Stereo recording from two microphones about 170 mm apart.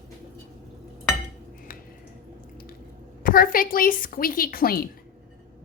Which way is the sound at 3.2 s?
55° left (ahead or behind).